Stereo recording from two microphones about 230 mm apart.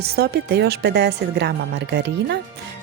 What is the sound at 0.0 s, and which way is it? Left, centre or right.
Speech, right.